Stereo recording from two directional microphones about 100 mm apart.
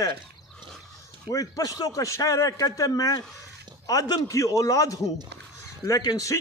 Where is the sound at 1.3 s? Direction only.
35° left (ahead or behind).